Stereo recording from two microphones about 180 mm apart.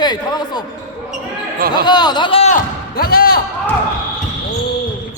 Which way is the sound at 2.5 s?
55° left (ahead or behind).